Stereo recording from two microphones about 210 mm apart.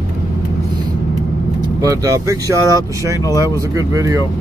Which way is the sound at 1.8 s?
15° right (ahead or behind).